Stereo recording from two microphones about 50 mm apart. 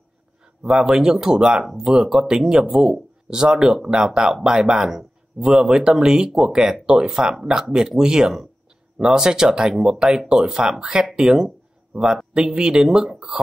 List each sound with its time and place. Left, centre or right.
0.7 s speech: centre
12.4 s speech: centre